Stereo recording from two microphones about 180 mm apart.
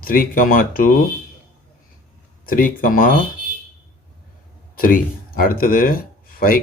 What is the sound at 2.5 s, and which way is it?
Speech, 50° left (ahead or behind).